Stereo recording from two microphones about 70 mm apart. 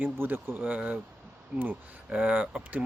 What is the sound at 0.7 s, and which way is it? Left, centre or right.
Speech, centre.